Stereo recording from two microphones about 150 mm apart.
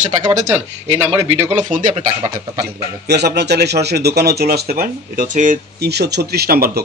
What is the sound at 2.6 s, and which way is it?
A man's voice, 90° right.